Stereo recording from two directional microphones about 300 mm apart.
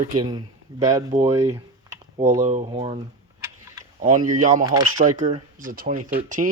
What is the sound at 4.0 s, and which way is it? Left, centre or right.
Speech, right.